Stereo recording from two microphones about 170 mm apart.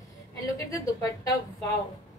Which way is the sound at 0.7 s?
20° left (ahead or behind).